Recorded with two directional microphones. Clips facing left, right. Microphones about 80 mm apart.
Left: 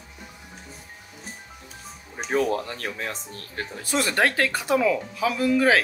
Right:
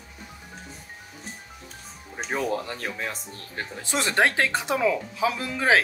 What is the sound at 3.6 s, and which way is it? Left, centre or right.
Speech, right.